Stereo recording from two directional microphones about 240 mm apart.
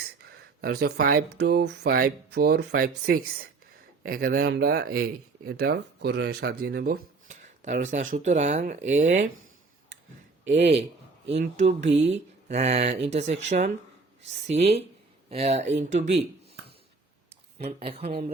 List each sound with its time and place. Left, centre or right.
0.3 s speech: right
10.5 s speech: right
17.2 s speech: right